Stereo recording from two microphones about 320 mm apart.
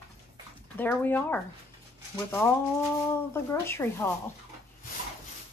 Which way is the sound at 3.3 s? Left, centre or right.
Centre.